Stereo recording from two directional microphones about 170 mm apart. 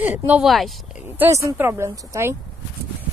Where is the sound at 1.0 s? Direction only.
10° right (ahead or behind).